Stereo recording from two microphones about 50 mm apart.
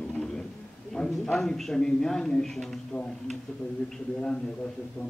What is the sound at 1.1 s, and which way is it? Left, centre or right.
A man's voice, centre.